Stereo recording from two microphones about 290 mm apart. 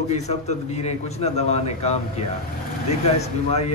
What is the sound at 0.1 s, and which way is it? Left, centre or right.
A man's voice, left.